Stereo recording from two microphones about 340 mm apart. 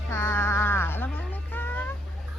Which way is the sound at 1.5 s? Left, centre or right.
Centre.